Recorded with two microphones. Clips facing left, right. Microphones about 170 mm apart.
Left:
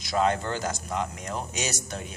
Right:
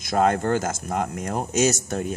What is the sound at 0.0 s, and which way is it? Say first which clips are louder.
Speech: right 4 dB; 50° right (ahead or behind).